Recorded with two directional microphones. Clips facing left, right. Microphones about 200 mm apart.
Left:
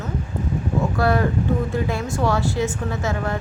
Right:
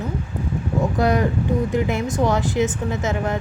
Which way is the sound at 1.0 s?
20° right (ahead or behind).